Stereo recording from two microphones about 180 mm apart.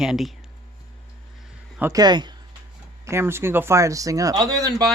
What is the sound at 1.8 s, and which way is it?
Speech, 20° right (ahead or behind).